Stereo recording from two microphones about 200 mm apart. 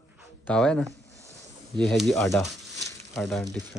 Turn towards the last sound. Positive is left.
turn(degrees=0)  # may be behind; listen again after turning